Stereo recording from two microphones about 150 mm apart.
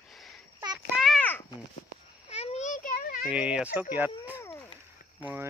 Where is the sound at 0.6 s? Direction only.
30° right (ahead or behind).